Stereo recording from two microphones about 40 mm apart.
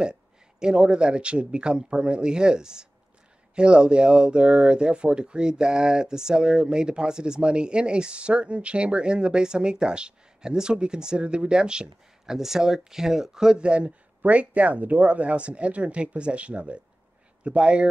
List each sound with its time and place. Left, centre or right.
0.0 s speech: centre
12.4 s speech: centre
13.6 s speech: right